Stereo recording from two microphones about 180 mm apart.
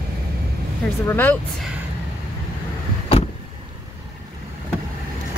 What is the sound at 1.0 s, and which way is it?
Speech, 10° left (ahead or behind).